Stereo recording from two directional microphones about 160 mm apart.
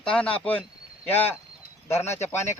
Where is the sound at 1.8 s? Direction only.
15° left (ahead or behind).